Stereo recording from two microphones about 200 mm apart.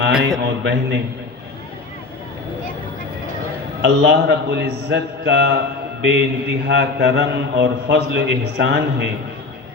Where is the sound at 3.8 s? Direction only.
60° right (ahead or behind).